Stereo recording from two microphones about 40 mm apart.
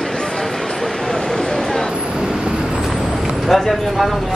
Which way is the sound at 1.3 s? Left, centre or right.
Centre.